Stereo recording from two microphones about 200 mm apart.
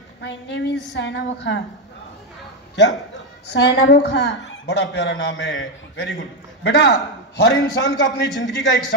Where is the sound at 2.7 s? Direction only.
60° left (ahead or behind).